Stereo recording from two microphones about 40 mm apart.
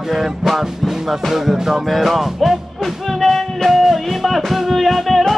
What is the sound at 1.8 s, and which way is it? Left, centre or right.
Music, centre.